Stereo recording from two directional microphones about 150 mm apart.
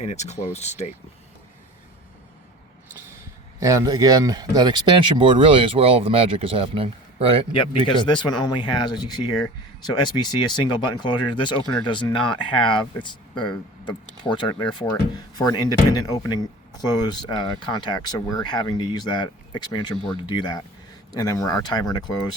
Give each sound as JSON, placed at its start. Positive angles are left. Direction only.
{"t": 0.0, "sound": "speech", "side_deg": 50}
{"t": 3.6, "sound": "speech", "side_deg": -20}
{"t": 7.5, "sound": "speech", "side_deg": 35}
{"t": 14.3, "sound": "speech", "side_deg": 30}